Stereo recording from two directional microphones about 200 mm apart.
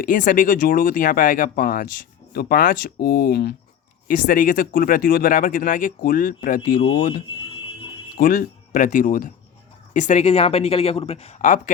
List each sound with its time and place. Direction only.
0.0 s speech: 45° left (ahead or behind)